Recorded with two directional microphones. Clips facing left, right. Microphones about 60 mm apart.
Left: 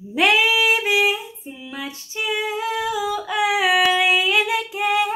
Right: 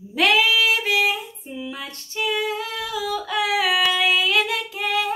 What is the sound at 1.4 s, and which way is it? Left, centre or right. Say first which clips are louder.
Female singing: even; centre.